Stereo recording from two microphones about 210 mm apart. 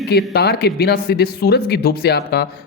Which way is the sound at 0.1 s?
50° left (ahead or behind).